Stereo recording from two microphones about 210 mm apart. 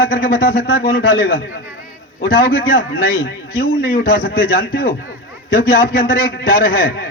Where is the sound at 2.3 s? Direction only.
45° left (ahead or behind).